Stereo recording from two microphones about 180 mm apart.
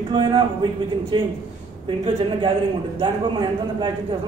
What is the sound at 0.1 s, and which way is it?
A man's voice, 25° right (ahead or behind).